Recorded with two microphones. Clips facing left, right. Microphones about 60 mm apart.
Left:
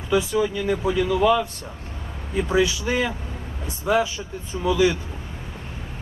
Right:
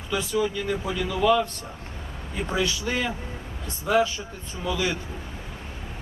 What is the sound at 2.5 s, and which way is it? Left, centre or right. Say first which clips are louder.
Speech: left 5 dB; centre.